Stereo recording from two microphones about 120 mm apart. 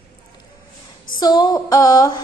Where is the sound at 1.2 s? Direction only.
35° left (ahead or behind).